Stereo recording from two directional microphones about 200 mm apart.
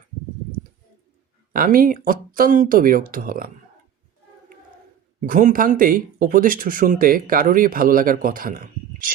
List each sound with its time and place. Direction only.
1.5 s speech: 45° right (ahead or behind)
5.2 s speech: 40° right (ahead or behind)